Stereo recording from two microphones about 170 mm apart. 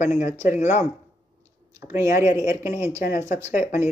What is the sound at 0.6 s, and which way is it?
Speech, 45° left (ahead or behind).